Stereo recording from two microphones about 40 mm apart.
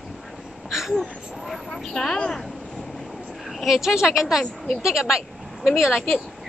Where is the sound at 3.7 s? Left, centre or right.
Centre.